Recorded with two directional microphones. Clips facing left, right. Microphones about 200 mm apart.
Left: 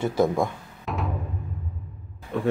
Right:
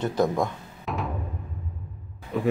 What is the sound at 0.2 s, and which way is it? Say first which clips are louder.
Music: left 2 dB; 5° left (ahead or behind).